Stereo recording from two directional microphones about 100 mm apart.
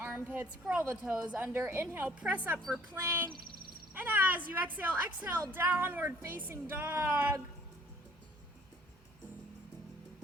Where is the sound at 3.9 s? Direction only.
20° right (ahead or behind).